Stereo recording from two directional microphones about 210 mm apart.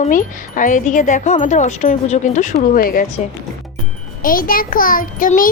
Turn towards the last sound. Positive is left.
turn(degrees=40)  # may be behind; listen again after turning